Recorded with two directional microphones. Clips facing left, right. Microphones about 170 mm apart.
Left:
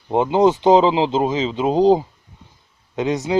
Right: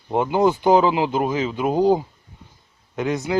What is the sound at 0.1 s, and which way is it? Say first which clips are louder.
Speech: left 3 dB; 20° left (ahead or behind).